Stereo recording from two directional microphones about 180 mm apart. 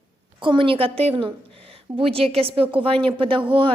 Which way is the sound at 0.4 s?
30° right (ahead or behind).